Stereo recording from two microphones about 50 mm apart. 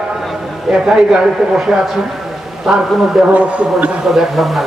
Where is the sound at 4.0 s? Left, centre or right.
Centre.